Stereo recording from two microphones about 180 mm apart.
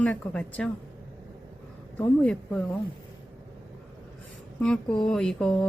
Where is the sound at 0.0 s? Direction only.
10° left (ahead or behind).